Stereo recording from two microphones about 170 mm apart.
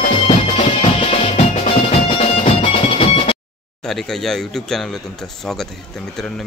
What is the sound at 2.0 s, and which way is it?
Music, 35° left (ahead or behind).